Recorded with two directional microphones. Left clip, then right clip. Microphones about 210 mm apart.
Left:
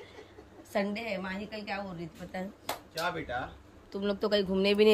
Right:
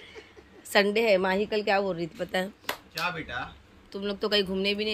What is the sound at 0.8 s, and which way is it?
A woman's voice, 20° right (ahead or behind).